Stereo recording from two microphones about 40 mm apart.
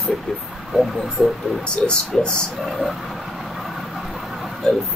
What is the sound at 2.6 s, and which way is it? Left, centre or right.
Speech, centre.